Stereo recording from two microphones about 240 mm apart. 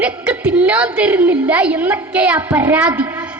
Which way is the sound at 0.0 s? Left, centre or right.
Centre.